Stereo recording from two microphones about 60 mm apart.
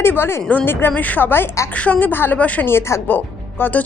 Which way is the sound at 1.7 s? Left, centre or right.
Left.